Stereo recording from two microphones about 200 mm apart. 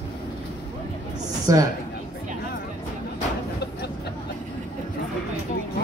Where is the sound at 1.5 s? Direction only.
15° right (ahead or behind).